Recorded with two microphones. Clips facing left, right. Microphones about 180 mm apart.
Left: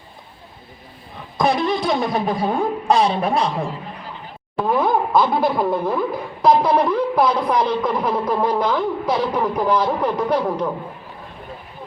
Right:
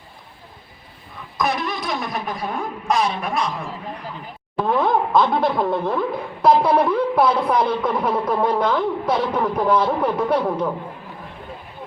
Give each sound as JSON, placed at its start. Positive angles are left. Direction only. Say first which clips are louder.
{"t": 1.4, "sound": "speech", "louder": "left 5 dB", "side_deg": 30}
{"t": 4.6, "sound": "speech", "louder": "left 1 dB", "side_deg": 5}
{"t": 6.4, "sound": "a sound", "louder": "even", "side_deg": -5}
{"t": 7.5, "sound": "speech", "louder": "even", "side_deg": -5}